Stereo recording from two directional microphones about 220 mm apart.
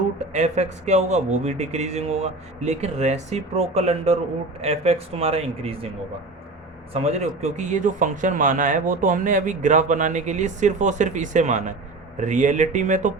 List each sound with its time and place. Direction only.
0.3 s speech: 30° right (ahead or behind)
6.9 s speech: 30° right (ahead or behind)